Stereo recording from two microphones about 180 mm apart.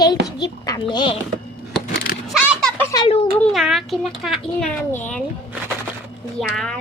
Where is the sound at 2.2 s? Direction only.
Centre (ahead or behind).